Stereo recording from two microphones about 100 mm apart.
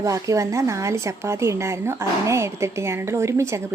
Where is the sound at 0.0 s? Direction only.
35° right (ahead or behind).